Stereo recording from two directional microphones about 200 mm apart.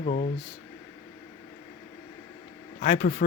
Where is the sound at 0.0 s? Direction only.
40° left (ahead or behind).